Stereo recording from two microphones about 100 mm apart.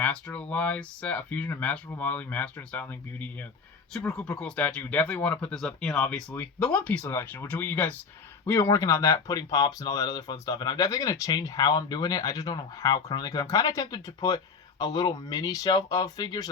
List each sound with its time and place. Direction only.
0.0 s speech: 10° left (ahead or behind)
3.9 s speech: 5° left (ahead or behind); by 16.5 s 45° left (ahead or behind)